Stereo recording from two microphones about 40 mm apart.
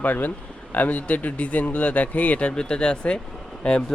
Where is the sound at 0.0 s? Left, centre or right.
Left.